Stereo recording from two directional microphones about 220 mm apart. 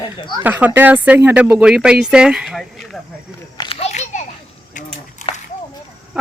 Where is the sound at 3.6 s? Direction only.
25° left (ahead or behind).